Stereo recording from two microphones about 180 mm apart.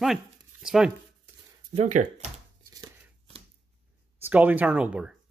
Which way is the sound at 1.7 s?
45° right (ahead or behind).